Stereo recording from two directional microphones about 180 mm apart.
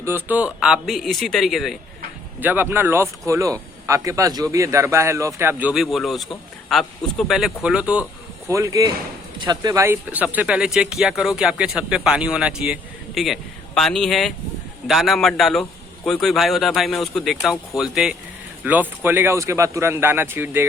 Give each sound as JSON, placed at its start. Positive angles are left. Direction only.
{"t": 0.0, "sound": "a man's voice", "side_deg": -10}
{"t": 8.4, "sound": "a man's voice", "side_deg": -15}